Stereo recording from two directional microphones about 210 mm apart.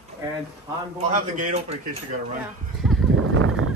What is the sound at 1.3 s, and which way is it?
Speech, 35° right (ahead or behind).